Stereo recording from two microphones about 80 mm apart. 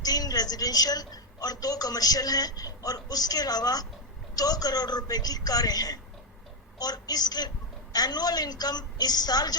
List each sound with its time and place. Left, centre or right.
0.0 s a woman's voice: left